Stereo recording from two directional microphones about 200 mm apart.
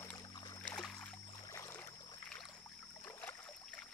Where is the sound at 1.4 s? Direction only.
15° left (ahead or behind).